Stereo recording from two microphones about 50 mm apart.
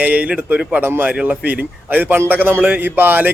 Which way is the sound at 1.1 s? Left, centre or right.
Right.